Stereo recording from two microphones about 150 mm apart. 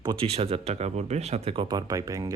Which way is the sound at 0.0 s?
25° right (ahead or behind).